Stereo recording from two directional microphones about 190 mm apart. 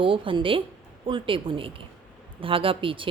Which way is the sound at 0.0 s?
25° right (ahead or behind).